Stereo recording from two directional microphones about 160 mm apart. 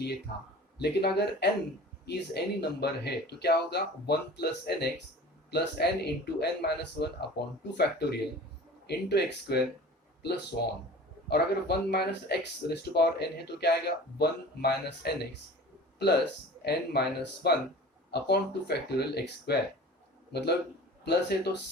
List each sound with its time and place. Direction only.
0.8 s speech: 90° left
10.5 s speech: 70° left (ahead or behind)
11.3 s speech: 90° left
16.6 s speech: 90° left